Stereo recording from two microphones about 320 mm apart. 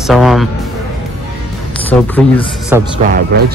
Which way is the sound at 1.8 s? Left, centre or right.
Centre.